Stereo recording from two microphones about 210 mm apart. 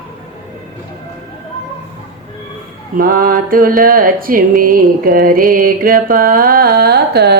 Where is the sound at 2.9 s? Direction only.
45° right (ahead or behind).